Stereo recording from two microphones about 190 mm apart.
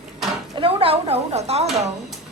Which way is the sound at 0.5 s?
30° right (ahead or behind).